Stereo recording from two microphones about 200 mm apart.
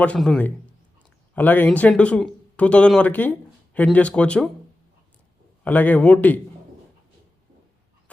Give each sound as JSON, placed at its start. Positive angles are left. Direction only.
{"t": 0.0, "sound": "speech", "side_deg": 5}
{"t": 5.6, "sound": "speech", "side_deg": 10}